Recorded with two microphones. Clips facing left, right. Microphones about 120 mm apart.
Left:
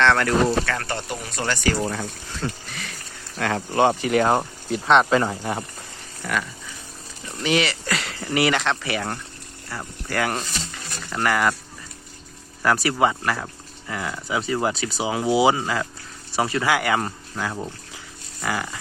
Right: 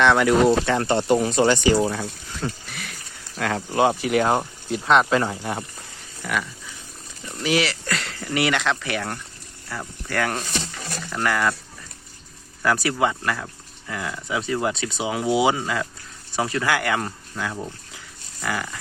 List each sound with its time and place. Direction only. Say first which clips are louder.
0.0 s speech: right 2 dB; 15° right (ahead or behind)
1.8 s speech: right 3 dB; 5° right (ahead or behind)
7.4 s speech: even; centre (ahead or behind)
12.6 s speech: left 1 dB; centre (ahead or behind)